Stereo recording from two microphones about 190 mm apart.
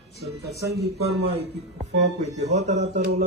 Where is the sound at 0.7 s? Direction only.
60° right (ahead or behind).